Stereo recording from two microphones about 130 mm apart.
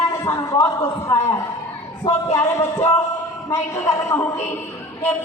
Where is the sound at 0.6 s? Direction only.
25° left (ahead or behind).